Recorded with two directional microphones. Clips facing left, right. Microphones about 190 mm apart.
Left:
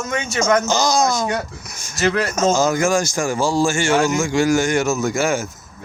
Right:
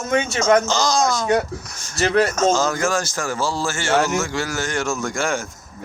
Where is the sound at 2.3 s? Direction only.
10° left (ahead or behind).